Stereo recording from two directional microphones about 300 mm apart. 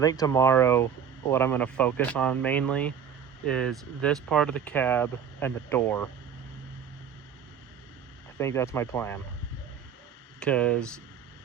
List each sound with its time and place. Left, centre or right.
0.0 s speech: centre
8.4 s speech: centre
10.4 s speech: centre